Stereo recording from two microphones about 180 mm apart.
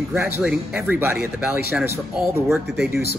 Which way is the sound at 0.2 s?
5° right (ahead or behind).